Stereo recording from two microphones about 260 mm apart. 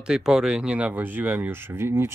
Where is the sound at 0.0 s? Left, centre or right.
Centre.